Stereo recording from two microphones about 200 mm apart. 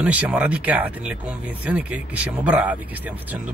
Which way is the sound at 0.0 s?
5° right (ahead or behind).